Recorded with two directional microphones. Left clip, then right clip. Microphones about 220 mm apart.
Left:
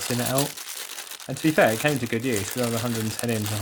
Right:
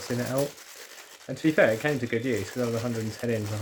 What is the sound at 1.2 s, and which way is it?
Speech, 30° left (ahead or behind).